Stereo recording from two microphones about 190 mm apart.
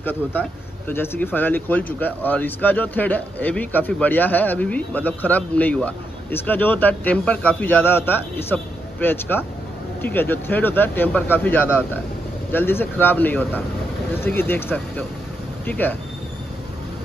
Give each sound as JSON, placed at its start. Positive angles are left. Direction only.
{"t": 0.0, "sound": "speech", "side_deg": 10}